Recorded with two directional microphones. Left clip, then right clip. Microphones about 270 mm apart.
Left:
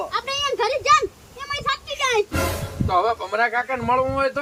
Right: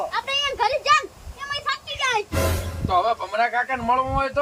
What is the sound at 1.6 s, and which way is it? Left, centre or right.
Music, centre.